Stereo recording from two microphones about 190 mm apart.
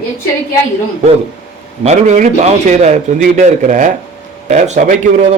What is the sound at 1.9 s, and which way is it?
A man's voice, 35° right (ahead or behind).